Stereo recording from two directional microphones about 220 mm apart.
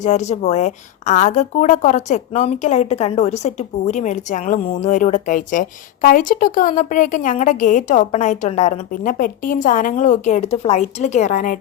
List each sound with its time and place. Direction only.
0.0 s a woman's voice: 30° left (ahead or behind)